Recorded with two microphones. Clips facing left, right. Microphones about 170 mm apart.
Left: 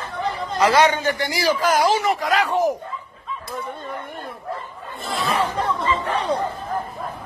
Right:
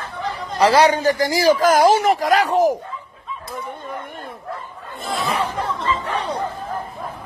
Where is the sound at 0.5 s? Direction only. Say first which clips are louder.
Right 3 dB; 35° right (ahead or behind).